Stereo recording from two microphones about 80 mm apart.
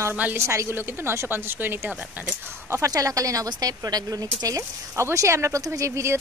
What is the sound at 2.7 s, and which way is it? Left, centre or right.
Speech, right.